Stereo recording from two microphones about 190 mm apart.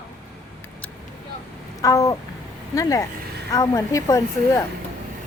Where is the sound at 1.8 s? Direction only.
15° left (ahead or behind).